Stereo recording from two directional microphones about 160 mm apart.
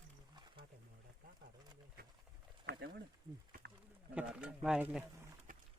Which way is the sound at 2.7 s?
75° right (ahead or behind).